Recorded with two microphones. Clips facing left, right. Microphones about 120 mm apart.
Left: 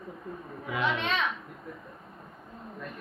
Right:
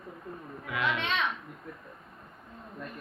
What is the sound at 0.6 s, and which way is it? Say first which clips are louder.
Speech: left 2 dB; 25° left (ahead or behind).